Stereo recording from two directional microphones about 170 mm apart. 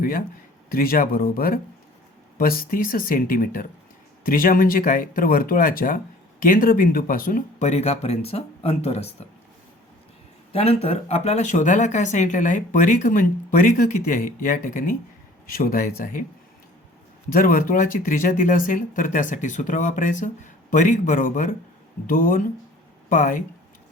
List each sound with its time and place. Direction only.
0.0 s speech: 55° left (ahead or behind); by 9.0 s 40° left (ahead or behind)
10.5 s speech: 35° left (ahead or behind); by 16.2 s 55° left (ahead or behind)
17.3 s speech: 55° left (ahead or behind)